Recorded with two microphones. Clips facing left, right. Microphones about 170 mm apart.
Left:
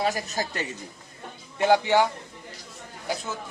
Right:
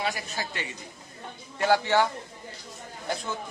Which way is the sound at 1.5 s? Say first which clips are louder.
Left 3 dB; 20° left (ahead or behind).